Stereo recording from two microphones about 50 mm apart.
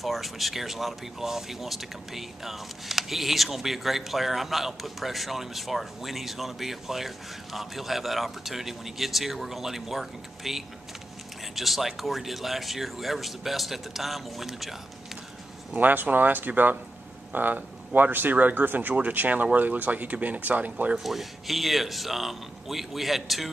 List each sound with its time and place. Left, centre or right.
0.0 s speech: centre
15.7 s speech: right
20.9 s speech: centre